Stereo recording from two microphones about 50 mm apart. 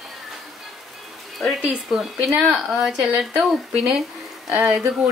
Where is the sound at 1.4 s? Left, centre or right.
Centre.